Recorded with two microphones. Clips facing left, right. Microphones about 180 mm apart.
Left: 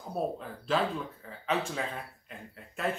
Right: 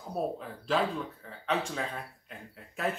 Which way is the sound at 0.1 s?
Centre (ahead or behind).